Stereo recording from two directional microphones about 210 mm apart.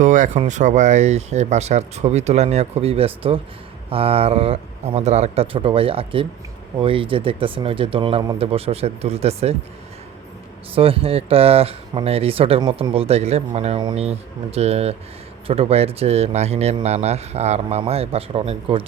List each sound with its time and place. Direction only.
0.0 s speech: 35° right (ahead or behind)
10.8 s speech: 25° right (ahead or behind)